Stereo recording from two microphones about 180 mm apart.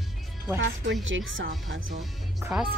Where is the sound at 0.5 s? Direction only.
90° right.